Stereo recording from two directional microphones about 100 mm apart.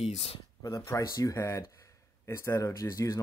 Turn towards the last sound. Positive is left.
turn(degrees=35)  # may be behind; listen again after turning